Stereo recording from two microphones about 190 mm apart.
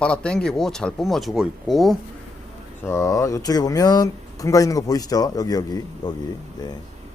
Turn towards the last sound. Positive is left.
turn(degrees=20)  # may be behind; listen again after turning